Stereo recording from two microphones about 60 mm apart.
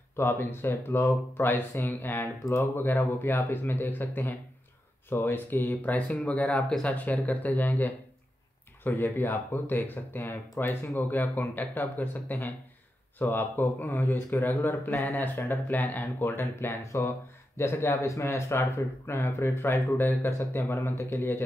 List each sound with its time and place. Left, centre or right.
0.2 s speech: left; by 7.0 s centre
7.0 s speech: left